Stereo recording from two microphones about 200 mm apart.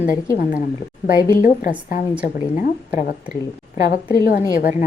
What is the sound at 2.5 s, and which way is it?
A woman's voice, 40° left (ahead or behind).